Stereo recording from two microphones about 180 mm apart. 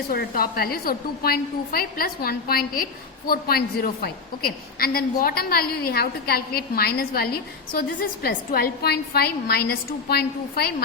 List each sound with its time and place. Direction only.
0.1 s a woman's voice: 55° left (ahead or behind)